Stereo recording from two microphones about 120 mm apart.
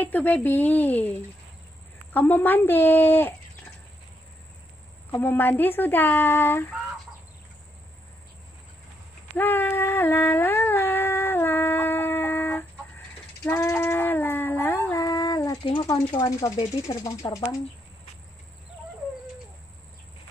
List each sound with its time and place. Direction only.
0.0 s speech: 15° left (ahead or behind)
2.1 s speech: 15° left (ahead or behind)
5.2 s speech: 15° left (ahead or behind)
9.4 s a sound: 15° left (ahead or behind)
13.5 s dog: 20° left (ahead or behind)
15.6 s speech: 45° left (ahead or behind); by 17.6 s 25° left (ahead or behind)